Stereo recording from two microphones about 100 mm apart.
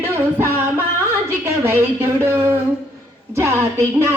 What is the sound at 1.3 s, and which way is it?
A woman's voice, 25° right (ahead or behind).